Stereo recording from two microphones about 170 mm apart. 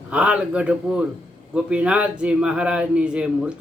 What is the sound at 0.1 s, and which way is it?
Speech, 5° right (ahead or behind).